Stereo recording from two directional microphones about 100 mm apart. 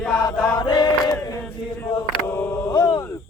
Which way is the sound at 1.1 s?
30° left (ahead or behind).